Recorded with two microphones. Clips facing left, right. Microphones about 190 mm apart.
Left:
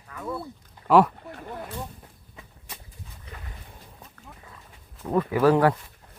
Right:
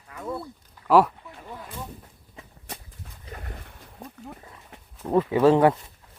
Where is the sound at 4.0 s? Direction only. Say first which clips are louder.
Right 8 dB; 35° right (ahead or behind).